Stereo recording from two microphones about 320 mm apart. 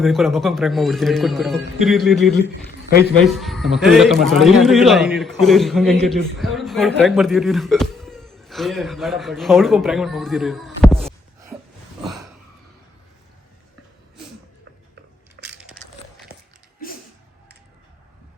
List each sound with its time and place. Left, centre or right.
0.0 s a man's voice: centre
2.6 s a man's voice: left
3.2 s a man's voice: centre
12.0 s gasp: centre
15.4 s crushing: right